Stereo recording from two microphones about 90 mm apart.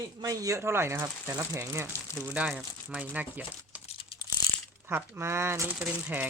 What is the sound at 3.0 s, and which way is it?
Speech, 20° right (ahead or behind).